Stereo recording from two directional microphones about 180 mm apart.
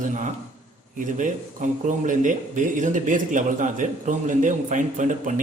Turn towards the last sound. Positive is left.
turn(degrees=-45)  # may be behind; listen again after turning